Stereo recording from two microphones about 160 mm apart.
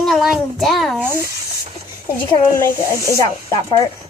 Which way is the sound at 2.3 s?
20° left (ahead or behind).